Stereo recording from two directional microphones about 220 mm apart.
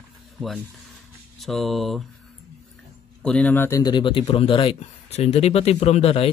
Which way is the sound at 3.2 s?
5° left (ahead or behind).